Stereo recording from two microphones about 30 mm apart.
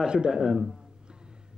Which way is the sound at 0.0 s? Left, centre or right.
Right.